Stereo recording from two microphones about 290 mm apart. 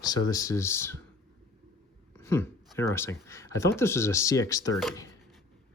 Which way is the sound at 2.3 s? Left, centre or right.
Centre.